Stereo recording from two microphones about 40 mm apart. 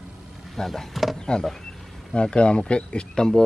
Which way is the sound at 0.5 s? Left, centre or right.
Centre.